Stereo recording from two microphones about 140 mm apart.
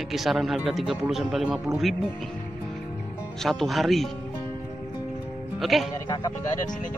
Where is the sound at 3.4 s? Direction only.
Centre (ahead or behind).